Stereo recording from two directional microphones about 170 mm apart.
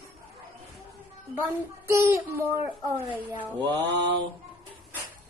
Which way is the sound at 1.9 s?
15° right (ahead or behind).